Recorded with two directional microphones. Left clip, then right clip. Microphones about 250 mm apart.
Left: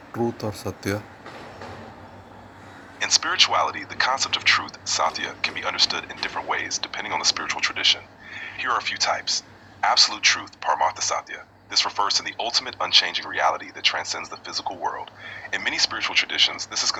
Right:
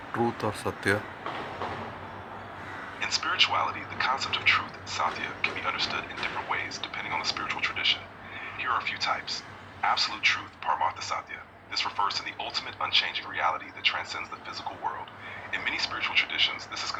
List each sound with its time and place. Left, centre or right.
0.3 s speech: left
3.0 s speech: left